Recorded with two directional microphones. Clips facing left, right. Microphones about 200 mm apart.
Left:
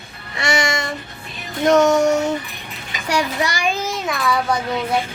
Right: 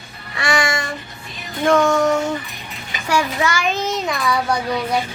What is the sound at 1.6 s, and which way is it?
Music, 20° left (ahead or behind).